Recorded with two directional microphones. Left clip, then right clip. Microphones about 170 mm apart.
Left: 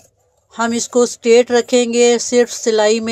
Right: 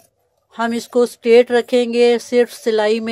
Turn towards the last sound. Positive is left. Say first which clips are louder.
# left 3 dB
turn(degrees=-5)  # may be behind; listen again after turning